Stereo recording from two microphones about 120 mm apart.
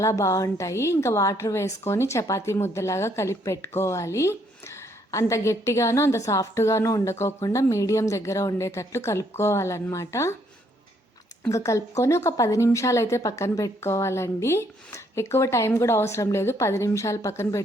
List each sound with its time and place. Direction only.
0.0 s a woman's voice: 25° left (ahead or behind)
11.4 s a woman's voice: 25° left (ahead or behind)